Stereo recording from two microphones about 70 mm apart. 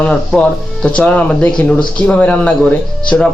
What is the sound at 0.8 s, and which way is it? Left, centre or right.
A man's voice, centre.